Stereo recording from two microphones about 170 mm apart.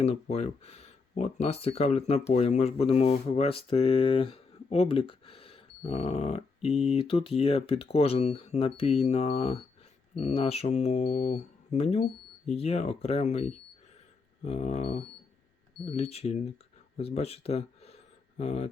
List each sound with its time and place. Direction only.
0.0 s speech: 40° left (ahead or behind)
6.7 s speech: centre (ahead or behind)
6.9 s speech: 30° left (ahead or behind)
17.0 s a sound: 35° left (ahead or behind)